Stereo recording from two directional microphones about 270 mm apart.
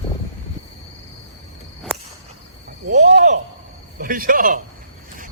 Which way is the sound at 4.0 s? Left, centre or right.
Right.